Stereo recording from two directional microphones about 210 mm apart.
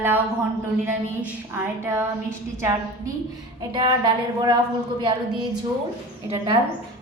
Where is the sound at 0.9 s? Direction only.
10° right (ahead or behind).